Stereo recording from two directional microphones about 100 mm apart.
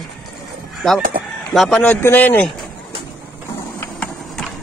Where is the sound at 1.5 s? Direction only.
5° left (ahead or behind).